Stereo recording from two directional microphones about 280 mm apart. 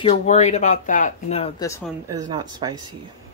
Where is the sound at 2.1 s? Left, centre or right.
Centre.